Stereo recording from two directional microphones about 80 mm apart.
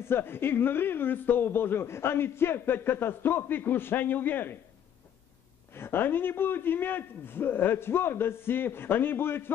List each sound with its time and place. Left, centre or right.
0.0 s speech: left
5.7 s speech: left